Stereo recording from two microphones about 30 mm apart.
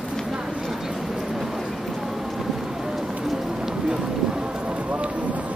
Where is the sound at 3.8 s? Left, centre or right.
Right.